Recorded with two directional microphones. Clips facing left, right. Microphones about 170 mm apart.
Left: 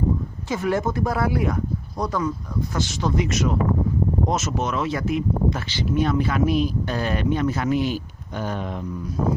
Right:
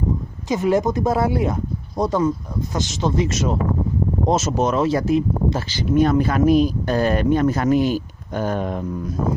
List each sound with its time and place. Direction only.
0.5 s speech: 20° right (ahead or behind); by 8.8 s 45° right (ahead or behind)